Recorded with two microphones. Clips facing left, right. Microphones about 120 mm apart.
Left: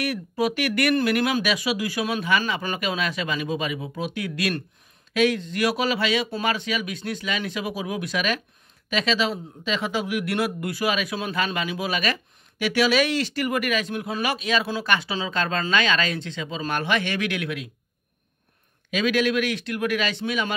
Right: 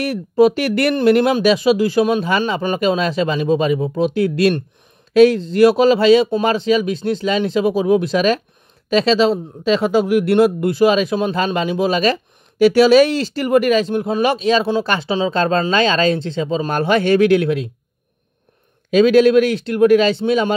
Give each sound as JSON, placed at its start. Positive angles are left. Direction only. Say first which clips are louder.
{"t": 0.0, "sound": "a man's voice", "louder": "right 11 dB", "side_deg": -30}
{"t": 18.9, "sound": "a man's voice", "louder": "right 12 dB", "side_deg": -35}